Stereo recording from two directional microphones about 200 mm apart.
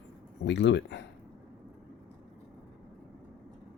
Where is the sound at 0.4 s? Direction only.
60° left (ahead or behind).